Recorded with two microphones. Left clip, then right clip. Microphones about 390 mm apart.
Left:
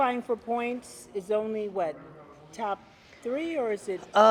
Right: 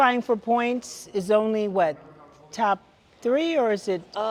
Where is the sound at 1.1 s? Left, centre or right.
Right.